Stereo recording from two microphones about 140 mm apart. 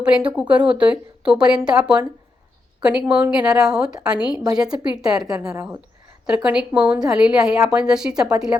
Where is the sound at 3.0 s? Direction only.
10° right (ahead or behind).